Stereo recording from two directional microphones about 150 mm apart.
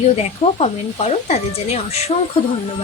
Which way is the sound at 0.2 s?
45° left (ahead or behind).